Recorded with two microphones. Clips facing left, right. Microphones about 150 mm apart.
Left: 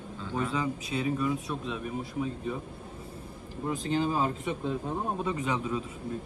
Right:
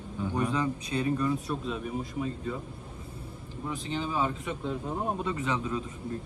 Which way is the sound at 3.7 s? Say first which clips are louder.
Left 3 dB; 45° left (ahead or behind).